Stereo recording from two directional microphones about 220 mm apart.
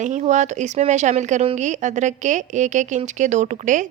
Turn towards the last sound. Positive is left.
turn(degrees=-35)  # may be behind; listen again after turning